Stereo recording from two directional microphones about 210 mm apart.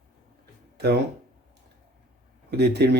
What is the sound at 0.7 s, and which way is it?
Music, 50° right (ahead or behind).